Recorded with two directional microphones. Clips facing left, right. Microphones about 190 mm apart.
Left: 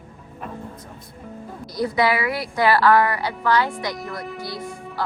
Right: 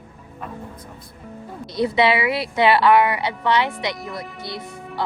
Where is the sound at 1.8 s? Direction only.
25° right (ahead or behind).